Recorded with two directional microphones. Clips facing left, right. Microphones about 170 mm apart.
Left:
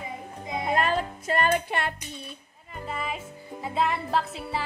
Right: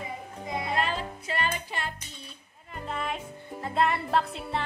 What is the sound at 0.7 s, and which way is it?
Music, 45° left (ahead or behind).